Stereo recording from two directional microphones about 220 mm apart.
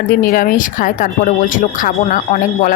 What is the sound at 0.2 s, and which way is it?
Speech, 40° left (ahead or behind).